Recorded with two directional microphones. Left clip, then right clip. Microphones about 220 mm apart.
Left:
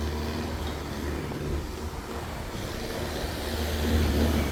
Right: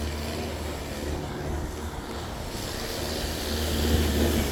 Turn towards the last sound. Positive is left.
turn(degrees=-50)  # may be behind; listen again after turning